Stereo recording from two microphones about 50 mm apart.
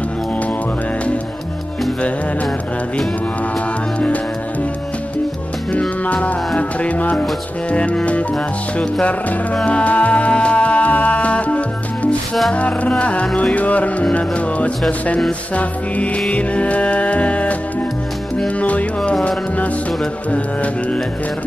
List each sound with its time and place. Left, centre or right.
3.5 s music: left
5.7 s music: left